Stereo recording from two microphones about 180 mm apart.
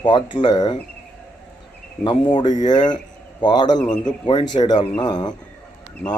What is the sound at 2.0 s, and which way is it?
Speech, 25° left (ahead or behind).